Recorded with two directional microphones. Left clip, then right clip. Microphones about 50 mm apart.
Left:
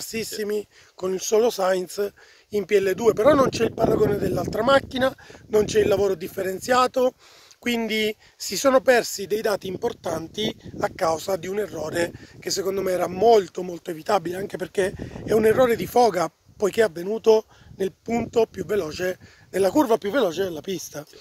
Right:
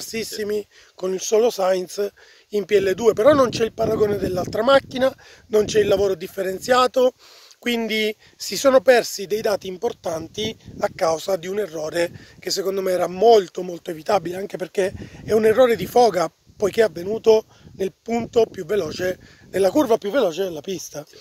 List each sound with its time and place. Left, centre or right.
0.0 s speech: right
0.9 s speech: right
1.2 s speech: centre
2.0 s a man's voice: right
4.2 s speech: right
4.8 s speech: right
10.8 s speech: right
18.3 s speech: right
19.7 s a man's voice: right
20.0 s speech: centre